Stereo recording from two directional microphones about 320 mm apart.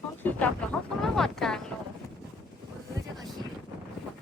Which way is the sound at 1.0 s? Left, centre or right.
Centre.